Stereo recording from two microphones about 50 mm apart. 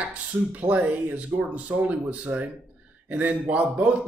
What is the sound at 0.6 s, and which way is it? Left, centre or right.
Speech, right.